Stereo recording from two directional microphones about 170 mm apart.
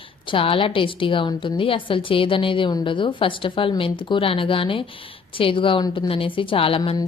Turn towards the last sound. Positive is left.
turn(degrees=30)  # may be behind; listen again after turning